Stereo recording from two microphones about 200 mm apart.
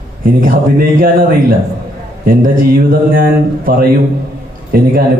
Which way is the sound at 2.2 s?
45° right (ahead or behind).